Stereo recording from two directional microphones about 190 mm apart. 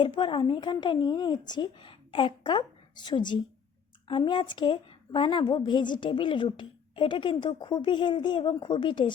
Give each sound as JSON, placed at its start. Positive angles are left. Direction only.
{"t": 0.0, "sound": "a woman's voice", "side_deg": 25}